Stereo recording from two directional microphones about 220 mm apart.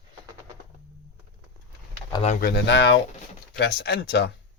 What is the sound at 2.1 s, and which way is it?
Speech, 25° left (ahead or behind).